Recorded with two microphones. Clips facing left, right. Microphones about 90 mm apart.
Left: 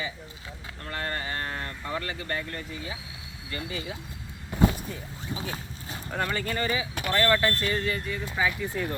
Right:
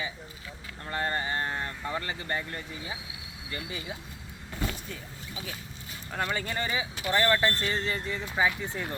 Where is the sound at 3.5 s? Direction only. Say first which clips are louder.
Left 3 dB; 20° right (ahead or behind).